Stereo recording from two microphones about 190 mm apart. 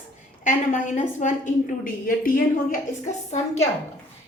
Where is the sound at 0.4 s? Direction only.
40° left (ahead or behind).